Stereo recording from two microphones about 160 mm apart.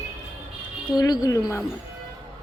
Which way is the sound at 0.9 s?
25° left (ahead or behind).